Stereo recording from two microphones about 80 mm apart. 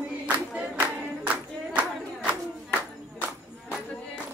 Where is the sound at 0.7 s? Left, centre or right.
Centre.